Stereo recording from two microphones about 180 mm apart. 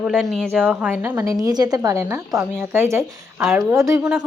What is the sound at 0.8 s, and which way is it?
Speech, 10° right (ahead or behind).